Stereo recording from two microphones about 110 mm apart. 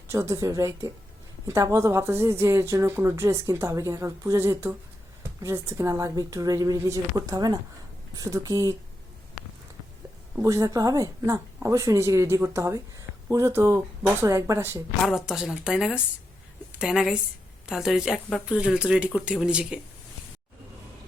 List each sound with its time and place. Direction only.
0.1 s a woman's voice: 25° right (ahead or behind)
10.4 s a woman's voice: 30° right (ahead or behind)
15.0 s a woman's voice: 5° right (ahead or behind)